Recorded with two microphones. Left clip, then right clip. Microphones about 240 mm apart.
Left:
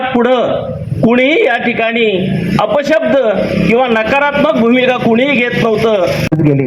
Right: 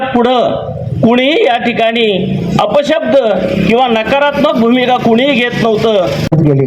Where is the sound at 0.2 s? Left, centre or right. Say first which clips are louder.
Right 1 dB; right.